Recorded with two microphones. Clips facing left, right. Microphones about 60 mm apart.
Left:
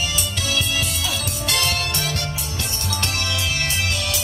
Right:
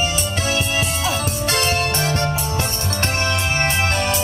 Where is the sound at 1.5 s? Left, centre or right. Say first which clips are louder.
Right 3 dB; right.